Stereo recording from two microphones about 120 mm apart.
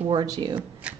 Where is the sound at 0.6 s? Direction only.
10° right (ahead or behind).